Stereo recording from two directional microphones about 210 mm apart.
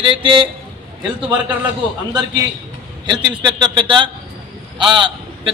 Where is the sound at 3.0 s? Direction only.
20° right (ahead or behind).